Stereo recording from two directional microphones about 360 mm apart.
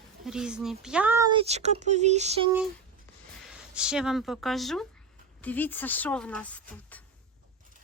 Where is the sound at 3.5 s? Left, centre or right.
Centre.